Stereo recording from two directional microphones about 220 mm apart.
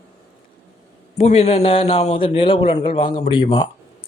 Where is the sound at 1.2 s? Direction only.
30° left (ahead or behind).